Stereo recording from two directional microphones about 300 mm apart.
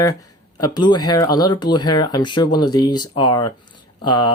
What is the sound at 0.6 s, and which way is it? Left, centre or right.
Speech, centre.